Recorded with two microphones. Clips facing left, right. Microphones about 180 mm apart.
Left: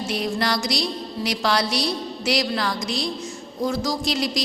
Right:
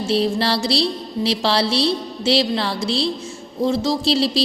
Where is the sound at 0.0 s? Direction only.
30° right (ahead or behind).